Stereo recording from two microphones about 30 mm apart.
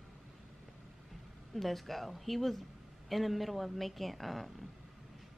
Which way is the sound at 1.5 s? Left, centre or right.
Centre.